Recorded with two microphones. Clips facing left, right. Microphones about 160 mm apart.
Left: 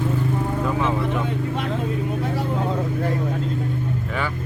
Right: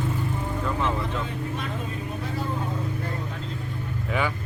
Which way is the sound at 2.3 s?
90° left.